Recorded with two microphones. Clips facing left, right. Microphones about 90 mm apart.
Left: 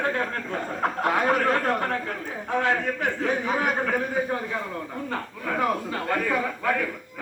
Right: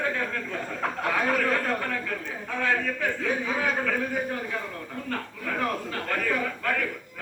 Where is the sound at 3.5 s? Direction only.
55° left (ahead or behind).